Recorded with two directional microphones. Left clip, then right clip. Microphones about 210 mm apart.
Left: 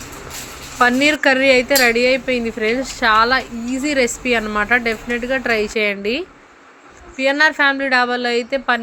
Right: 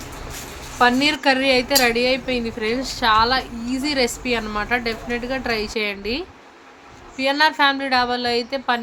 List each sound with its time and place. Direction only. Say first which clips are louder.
0.8 s speech: left 3 dB; 20° left (ahead or behind)